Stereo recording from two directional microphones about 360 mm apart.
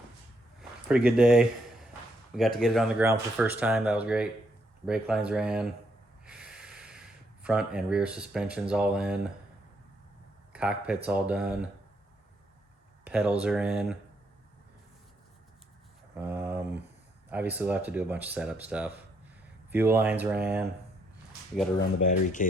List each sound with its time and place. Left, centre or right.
0.9 s speech: centre
6.2 s snort: centre
7.4 s speech: centre
10.5 s speech: centre
13.1 s speech: centre
16.1 s mantra: centre
17.2 s speech: centre
21.8 s speech: left